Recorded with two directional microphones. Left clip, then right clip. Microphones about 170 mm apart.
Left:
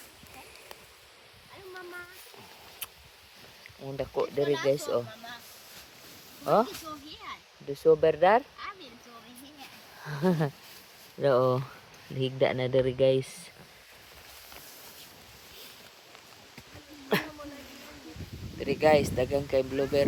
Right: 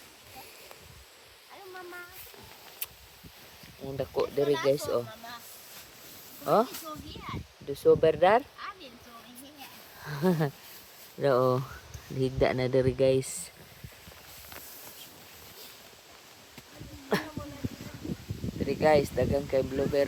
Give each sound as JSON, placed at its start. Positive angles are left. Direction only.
{"t": 3.8, "sound": "speech", "side_deg": -20}
{"t": 6.4, "sound": "speech", "side_deg": -15}
{"t": 10.0, "sound": "speech", "side_deg": -20}
{"t": 18.7, "sound": "speech", "side_deg": -10}